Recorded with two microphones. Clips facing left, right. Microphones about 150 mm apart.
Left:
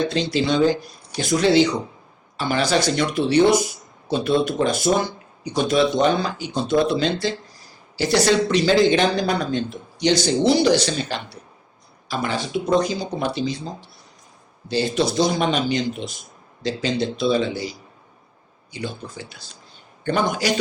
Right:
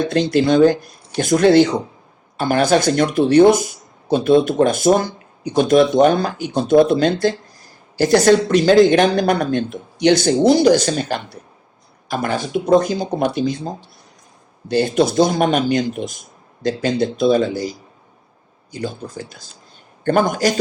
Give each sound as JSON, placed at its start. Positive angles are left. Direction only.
{"t": 0.1, "sound": "speech", "side_deg": -55}